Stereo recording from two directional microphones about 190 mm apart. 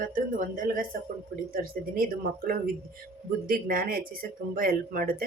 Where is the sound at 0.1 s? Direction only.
45° right (ahead or behind).